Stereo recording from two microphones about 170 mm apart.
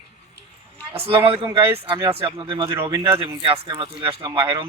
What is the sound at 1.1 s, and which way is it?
Speech, 30° right (ahead or behind).